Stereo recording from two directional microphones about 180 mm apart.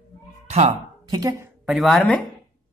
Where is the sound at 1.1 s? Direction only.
20° right (ahead or behind).